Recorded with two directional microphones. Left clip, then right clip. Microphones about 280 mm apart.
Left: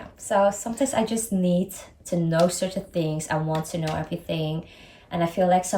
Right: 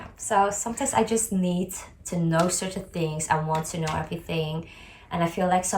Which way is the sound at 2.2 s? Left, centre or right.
Centre.